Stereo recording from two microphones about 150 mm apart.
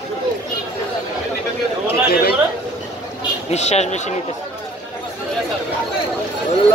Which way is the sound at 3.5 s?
45° left (ahead or behind).